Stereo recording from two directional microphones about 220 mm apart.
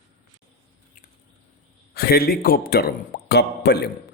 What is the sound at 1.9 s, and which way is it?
Speech, 45° left (ahead or behind).